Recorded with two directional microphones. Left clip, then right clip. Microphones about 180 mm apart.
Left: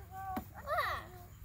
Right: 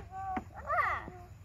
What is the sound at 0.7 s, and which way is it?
Children playing, 75° left (ahead or behind).